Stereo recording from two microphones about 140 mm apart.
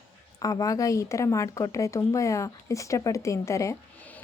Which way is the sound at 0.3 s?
25° left (ahead or behind).